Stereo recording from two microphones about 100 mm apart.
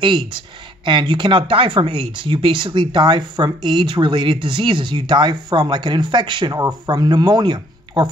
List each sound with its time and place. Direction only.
0.0 s speech: 50° right (ahead or behind)